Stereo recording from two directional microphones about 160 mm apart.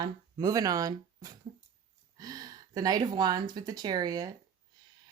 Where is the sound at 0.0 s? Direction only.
25° right (ahead or behind).